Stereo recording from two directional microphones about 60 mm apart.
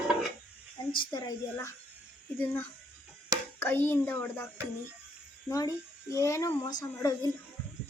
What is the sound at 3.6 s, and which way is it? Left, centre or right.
Speech, left.